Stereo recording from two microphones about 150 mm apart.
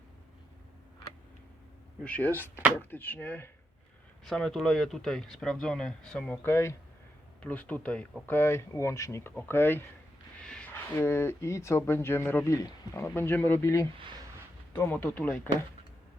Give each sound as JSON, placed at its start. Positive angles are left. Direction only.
{"t": 2.0, "sound": "speech", "side_deg": 10}
{"t": 4.3, "sound": "speech", "side_deg": 0}
{"t": 10.4, "sound": "a sound", "side_deg": 5}
{"t": 10.9, "sound": "speech", "side_deg": 15}